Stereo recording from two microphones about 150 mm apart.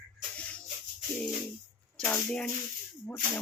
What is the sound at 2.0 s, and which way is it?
Speech, 15° left (ahead or behind).